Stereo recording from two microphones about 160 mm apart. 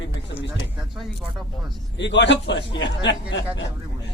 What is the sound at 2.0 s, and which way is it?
Speech, 90° left.